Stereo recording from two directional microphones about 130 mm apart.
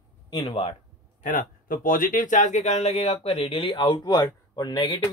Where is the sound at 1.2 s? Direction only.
90° left; by 5.0 s 35° left (ahead or behind).